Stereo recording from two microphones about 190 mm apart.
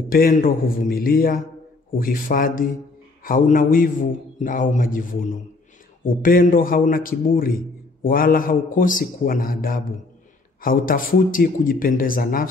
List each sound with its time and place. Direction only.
0.1 s a man's voice: 50° left (ahead or behind)